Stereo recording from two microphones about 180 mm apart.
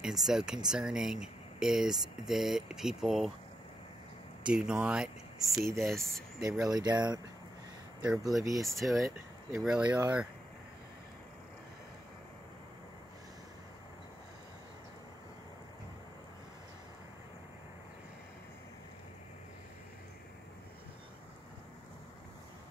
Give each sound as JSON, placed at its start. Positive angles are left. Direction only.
{"t": 0.0, "sound": "speech", "side_deg": 0}
{"t": 4.6, "sound": "speech", "side_deg": -5}
{"t": 6.6, "sound": "speech", "side_deg": -20}
{"t": 8.0, "sound": "speech", "side_deg": 0}
{"t": 8.4, "sound": "speech", "side_deg": -20}
{"t": 8.6, "sound": "speech", "side_deg": 0}